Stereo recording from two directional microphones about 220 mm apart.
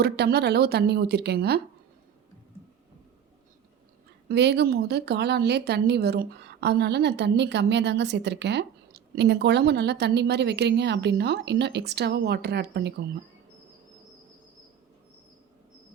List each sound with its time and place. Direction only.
0.0 s speech: 50° right (ahead or behind)
4.3 s speech: 50° right (ahead or behind)